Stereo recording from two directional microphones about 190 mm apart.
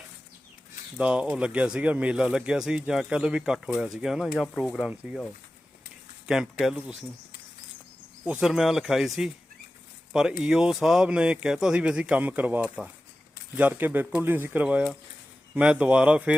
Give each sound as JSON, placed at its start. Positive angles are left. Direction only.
{"t": 0.9, "sound": "speech", "side_deg": -5}
{"t": 6.2, "sound": "speech", "side_deg": -5}
{"t": 8.2, "sound": "speech", "side_deg": -5}